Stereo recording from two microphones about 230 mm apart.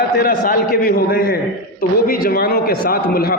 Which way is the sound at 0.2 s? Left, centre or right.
Left.